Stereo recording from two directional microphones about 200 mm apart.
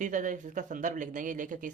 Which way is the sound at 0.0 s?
40° right (ahead or behind).